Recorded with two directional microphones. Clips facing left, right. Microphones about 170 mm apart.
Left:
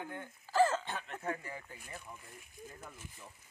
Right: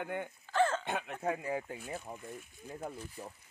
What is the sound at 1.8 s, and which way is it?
Speech, 50° right (ahead or behind).